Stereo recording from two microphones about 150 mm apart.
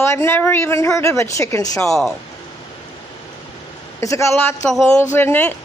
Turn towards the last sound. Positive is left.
turn(degrees=15)  # may be behind; listen again after turning